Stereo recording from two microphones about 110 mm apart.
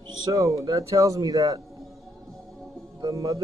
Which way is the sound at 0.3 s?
30° right (ahead or behind).